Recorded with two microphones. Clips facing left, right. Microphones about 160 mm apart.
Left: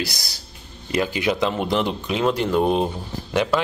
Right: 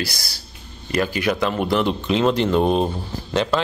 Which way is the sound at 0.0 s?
20° left (ahead or behind).